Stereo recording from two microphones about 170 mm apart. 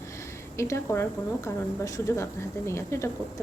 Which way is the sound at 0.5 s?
15° left (ahead or behind).